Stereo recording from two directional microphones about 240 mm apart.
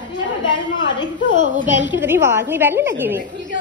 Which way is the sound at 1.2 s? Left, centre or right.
Left.